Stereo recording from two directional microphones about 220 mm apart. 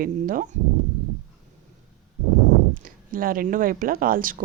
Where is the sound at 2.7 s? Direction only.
40° right (ahead or behind).